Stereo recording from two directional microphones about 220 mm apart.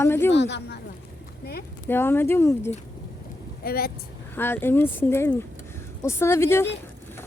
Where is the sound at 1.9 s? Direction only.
10° left (ahead or behind).